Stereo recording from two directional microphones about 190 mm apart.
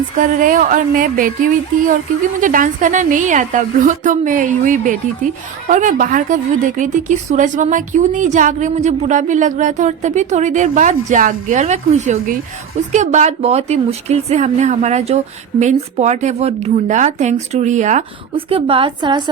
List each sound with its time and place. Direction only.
0.2 s a woman's voice: 45° right (ahead or behind)
18.3 s a woman's voice: 30° right (ahead or behind)